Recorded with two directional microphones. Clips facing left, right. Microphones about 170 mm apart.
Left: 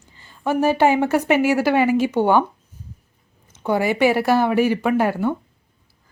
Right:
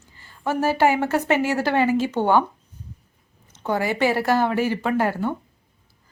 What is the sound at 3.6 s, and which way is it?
A woman's voice, 15° left (ahead or behind).